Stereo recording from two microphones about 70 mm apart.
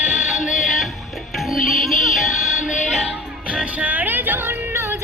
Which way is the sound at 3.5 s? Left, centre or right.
Centre.